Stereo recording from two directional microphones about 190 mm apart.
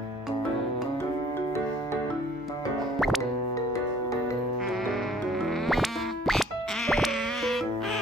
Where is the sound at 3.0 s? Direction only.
Centre (ahead or behind).